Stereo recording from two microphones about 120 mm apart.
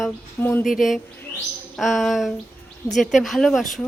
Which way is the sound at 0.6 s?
Centre (ahead or behind).